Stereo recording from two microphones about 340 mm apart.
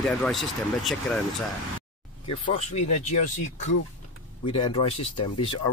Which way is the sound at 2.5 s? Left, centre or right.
Left.